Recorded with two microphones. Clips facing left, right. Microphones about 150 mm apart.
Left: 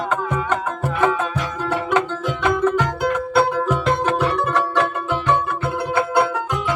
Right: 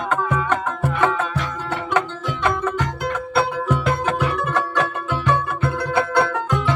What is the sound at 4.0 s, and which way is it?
Music, 30° left (ahead or behind).